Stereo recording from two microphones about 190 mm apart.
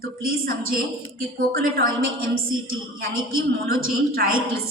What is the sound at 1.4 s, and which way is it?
Speech, 50° right (ahead or behind).